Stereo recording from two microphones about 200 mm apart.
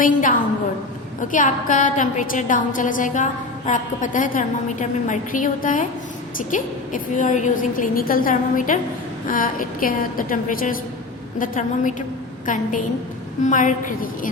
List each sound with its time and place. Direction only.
0.0 s a woman's voice: 40° left (ahead or behind)